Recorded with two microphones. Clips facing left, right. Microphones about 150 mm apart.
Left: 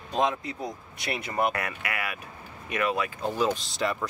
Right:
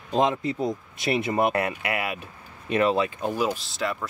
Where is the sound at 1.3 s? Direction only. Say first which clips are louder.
Right 2 dB; 25° right (ahead or behind).